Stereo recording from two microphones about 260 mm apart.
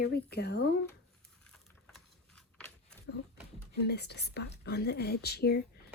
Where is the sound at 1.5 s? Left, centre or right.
Centre.